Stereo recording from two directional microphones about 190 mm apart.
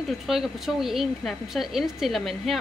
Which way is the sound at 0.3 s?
Centre (ahead or behind).